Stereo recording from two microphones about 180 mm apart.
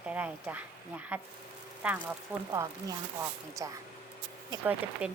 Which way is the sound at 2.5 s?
15° right (ahead or behind).